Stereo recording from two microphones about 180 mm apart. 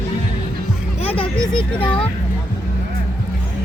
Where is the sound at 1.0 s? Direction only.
30° left (ahead or behind).